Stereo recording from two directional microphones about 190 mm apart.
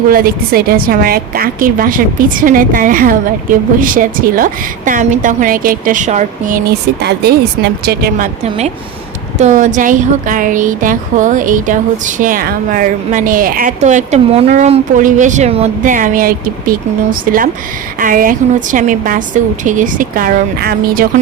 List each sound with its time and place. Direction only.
0.1 s speech: 50° right (ahead or behind)
6.7 s speech: 60° right (ahead or behind)
9.4 s speech: 40° right (ahead or behind)